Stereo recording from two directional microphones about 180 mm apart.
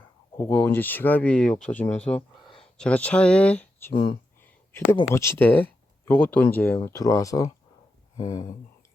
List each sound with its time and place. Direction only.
0.3 s speech: 10° left (ahead or behind)
3.9 s speech: 25° left (ahead or behind)
5.0 s speech: 15° left (ahead or behind)